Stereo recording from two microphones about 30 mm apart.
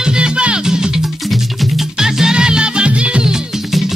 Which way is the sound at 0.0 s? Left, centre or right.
Right.